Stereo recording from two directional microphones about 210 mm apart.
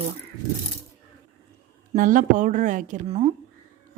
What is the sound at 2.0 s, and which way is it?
Speech, 40° right (ahead or behind).